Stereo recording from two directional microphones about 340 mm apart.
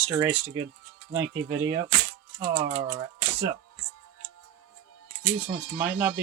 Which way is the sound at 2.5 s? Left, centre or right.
Centre.